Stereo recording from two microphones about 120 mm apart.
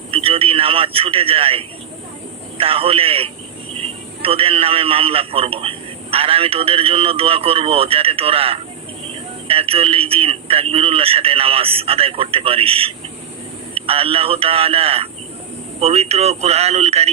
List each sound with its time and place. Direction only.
0.1 s radio: 50° right (ahead or behind)
2.6 s a man's voice: 50° right (ahead or behind)